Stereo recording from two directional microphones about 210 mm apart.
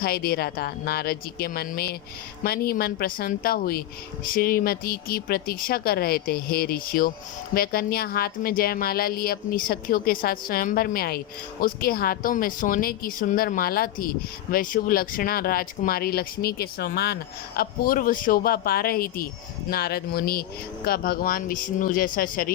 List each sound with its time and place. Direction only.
0.0 s a woman's voice: 45° left (ahead or behind)